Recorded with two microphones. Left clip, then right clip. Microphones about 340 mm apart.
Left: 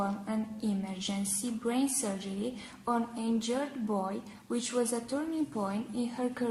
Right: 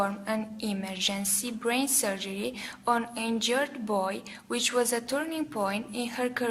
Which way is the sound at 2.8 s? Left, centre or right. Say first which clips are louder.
Right 5 dB; right.